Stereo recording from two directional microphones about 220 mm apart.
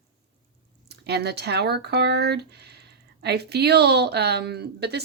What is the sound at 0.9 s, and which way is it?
Speech, 50° right (ahead or behind).